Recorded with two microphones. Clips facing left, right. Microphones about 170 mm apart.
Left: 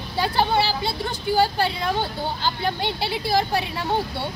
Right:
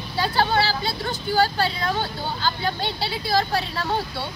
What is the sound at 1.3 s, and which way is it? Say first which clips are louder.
A woman's voice: left 1 dB; 15° left (ahead or behind).